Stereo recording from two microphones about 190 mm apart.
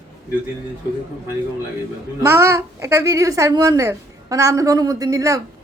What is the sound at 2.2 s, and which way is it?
A child's voice, 15° right (ahead or behind).